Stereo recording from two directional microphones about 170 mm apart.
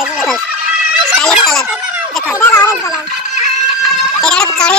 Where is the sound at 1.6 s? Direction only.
10° right (ahead or behind).